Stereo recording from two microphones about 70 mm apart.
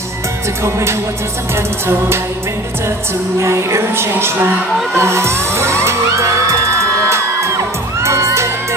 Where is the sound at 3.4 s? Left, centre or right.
Right.